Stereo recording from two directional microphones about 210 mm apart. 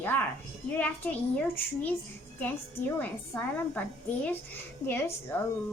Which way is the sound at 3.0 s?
10° left (ahead or behind).